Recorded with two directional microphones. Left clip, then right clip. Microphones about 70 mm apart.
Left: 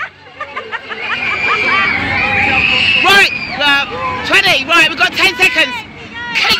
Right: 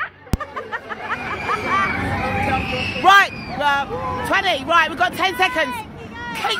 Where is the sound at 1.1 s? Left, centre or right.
Centre.